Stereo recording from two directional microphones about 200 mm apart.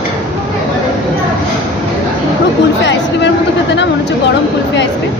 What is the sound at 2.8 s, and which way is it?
Speech, 60° left (ahead or behind).